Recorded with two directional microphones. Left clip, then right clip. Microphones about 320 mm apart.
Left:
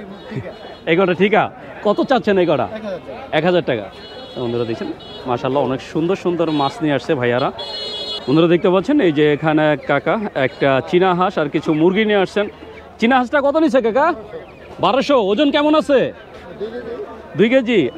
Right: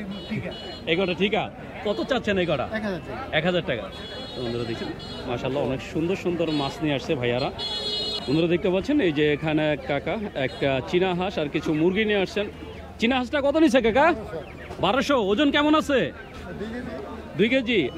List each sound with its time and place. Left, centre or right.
0.8 s a man's voice: left
2.7 s speech: right
3.3 s a man's voice: left
5.3 s a man's voice: left
13.6 s a man's voice: centre
17.4 s a man's voice: left